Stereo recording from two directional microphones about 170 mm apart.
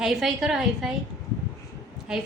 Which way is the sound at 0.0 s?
Centre (ahead or behind).